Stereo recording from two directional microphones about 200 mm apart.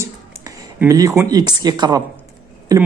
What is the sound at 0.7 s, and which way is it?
Speech, 15° right (ahead or behind).